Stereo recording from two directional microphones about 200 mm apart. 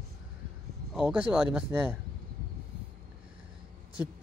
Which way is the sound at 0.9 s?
5° right (ahead or behind).